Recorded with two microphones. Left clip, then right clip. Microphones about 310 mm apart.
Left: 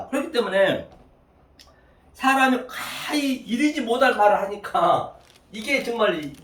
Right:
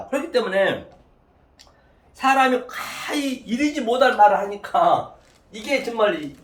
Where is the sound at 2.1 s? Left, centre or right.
Centre.